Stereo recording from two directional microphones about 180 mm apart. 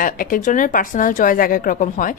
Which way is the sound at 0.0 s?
50° left (ahead or behind).